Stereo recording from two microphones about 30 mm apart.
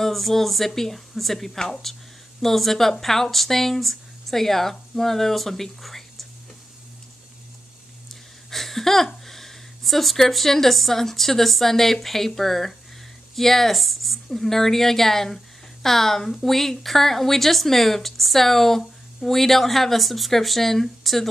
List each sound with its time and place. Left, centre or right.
0.0 s a woman's voice: centre
8.5 s a sound: centre
10.3 s a woman's voice: centre